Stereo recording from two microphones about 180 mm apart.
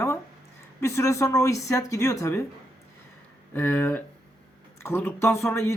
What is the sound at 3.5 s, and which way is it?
Speech, 10° left (ahead or behind).